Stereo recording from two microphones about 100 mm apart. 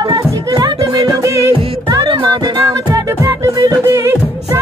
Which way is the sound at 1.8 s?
50° right (ahead or behind).